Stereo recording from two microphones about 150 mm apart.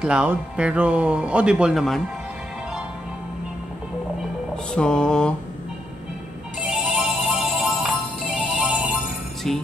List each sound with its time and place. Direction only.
0.0 s speech: 10° right (ahead or behind)
4.7 s mantra: 5° left (ahead or behind)
6.6 s music: 5° right (ahead or behind)
9.5 s mantra: 5° left (ahead or behind)